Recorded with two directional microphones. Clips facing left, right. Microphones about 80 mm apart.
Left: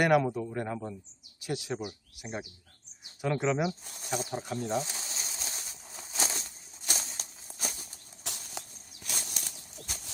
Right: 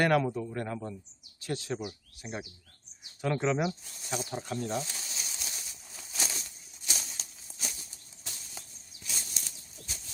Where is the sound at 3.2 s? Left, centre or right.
Centre.